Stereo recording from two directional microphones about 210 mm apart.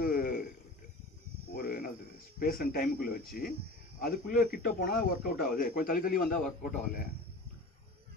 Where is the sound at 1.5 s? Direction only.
45° left (ahead or behind).